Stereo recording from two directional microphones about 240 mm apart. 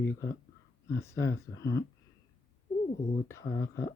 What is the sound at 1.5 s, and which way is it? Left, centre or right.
Speech, left.